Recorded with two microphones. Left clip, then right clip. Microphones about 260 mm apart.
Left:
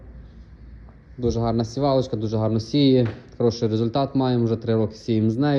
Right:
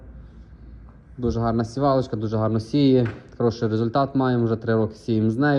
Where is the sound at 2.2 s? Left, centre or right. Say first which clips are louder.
Even; centre.